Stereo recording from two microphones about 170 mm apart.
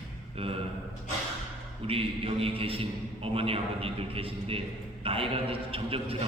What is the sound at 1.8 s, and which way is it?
A man's voice, 35° right (ahead or behind).